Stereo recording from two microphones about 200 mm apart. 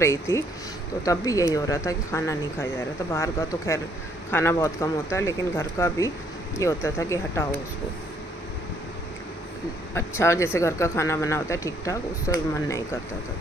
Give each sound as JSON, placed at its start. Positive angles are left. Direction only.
{"t": 0.0, "sound": "speech", "side_deg": 15}
{"t": 9.9, "sound": "speech", "side_deg": 15}